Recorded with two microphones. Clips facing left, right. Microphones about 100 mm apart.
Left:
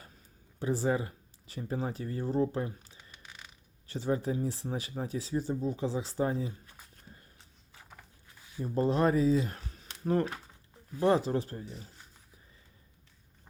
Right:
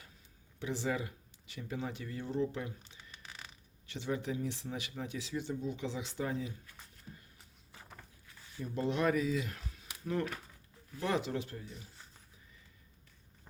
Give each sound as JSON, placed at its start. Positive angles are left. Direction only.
{"t": 0.6, "sound": "speech", "side_deg": 40}
{"t": 6.9, "sound": "walk", "side_deg": 35}
{"t": 7.7, "sound": "a sound", "side_deg": 0}
{"t": 8.6, "sound": "speech", "side_deg": 35}